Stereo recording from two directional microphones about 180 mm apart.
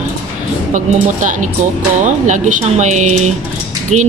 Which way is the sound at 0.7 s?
45° right (ahead or behind).